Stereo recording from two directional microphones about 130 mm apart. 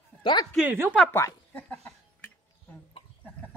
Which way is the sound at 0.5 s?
15° right (ahead or behind).